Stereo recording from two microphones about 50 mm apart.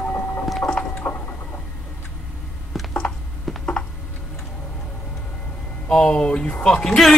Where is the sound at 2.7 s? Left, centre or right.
Centre.